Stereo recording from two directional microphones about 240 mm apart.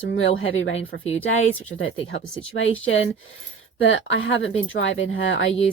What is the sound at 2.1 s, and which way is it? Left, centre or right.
Speech, left.